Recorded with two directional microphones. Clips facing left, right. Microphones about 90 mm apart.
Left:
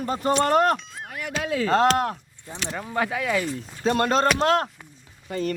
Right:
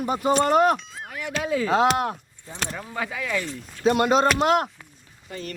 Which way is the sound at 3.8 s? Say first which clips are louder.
Right 2 dB; 10° right (ahead or behind).